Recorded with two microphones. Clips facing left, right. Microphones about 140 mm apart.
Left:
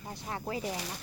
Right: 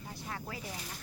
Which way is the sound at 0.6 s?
80° left.